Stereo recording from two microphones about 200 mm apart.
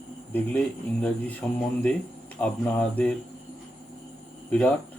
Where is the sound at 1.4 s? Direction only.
10° left (ahead or behind).